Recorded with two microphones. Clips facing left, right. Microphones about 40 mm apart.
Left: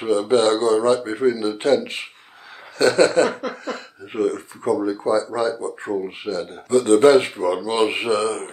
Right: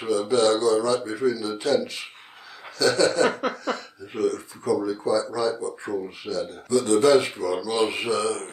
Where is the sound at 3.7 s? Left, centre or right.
Left.